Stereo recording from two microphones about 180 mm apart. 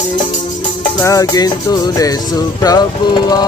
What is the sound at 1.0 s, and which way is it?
Music, 20° left (ahead or behind).